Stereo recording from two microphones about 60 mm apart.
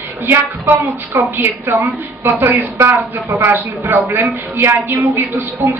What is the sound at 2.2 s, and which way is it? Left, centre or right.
A woman's voice, right.